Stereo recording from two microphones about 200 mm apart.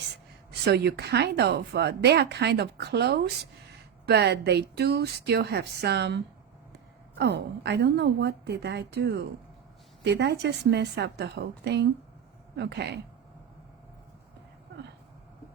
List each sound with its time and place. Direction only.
0.6 s speech: 55° right (ahead or behind)